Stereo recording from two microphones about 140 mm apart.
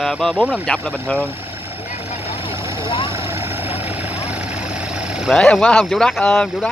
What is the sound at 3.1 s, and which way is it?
Vehicle, 15° right (ahead or behind).